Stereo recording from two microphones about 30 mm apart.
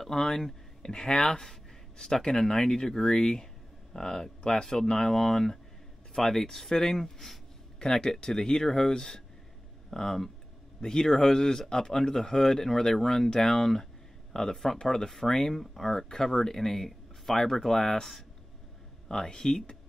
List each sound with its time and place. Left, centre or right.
0.0 s speech: centre
0.8 s speech: left; by 7.3 s centre
7.8 s speech: centre
19.2 s speech: centre